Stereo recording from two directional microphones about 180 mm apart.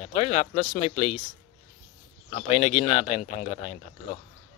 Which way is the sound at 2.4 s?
35° left (ahead or behind).